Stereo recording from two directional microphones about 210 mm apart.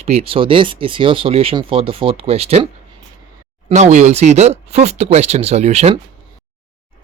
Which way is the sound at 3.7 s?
30° right (ahead or behind).